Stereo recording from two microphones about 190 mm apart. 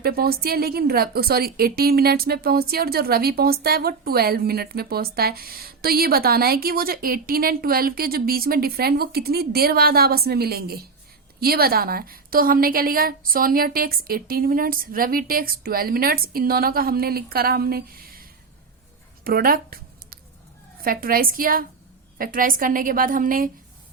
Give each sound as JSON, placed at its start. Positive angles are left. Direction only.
{"t": 0.0, "sound": "a woman's voice", "side_deg": -55}
{"t": 19.2, "sound": "a sound", "side_deg": -50}
{"t": 20.8, "sound": "a woman's voice", "side_deg": -50}